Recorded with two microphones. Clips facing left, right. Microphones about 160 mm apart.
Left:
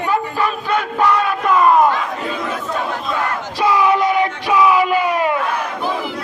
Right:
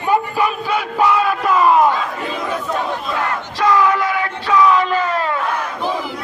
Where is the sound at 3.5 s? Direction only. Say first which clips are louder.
Even; 15° left (ahead or behind).